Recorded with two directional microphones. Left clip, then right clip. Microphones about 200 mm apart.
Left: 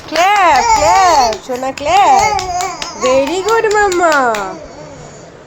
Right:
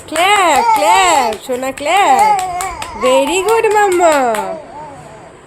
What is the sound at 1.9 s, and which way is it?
Speech, 60° right (ahead or behind).